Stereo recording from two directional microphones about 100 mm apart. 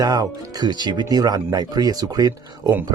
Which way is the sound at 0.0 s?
40° right (ahead or behind).